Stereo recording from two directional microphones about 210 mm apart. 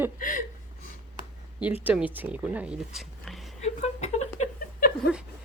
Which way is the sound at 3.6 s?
35° left (ahead or behind).